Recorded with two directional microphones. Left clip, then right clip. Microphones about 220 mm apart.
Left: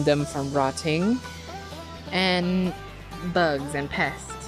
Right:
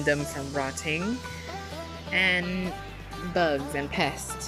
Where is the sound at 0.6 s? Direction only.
15° left (ahead or behind).